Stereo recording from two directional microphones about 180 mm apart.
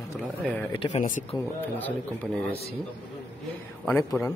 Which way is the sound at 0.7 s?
30° left (ahead or behind).